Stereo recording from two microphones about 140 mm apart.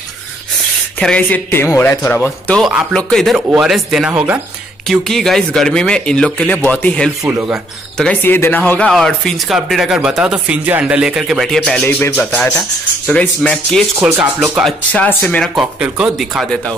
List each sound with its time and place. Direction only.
0.9 s speech: 10° left (ahead or behind)
2.6 s speech: centre (ahead or behind)
4.8 s speech: centre (ahead or behind)
7.2 s speech: 15° right (ahead or behind)
8.0 s speech: 10° left (ahead or behind)
13.9 s speech: 15° right (ahead or behind)
14.6 s speech: 10° left (ahead or behind)
15.5 s speech: 5° right (ahead or behind)